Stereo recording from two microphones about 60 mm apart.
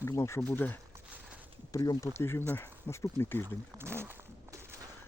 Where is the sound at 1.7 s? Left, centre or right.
Left.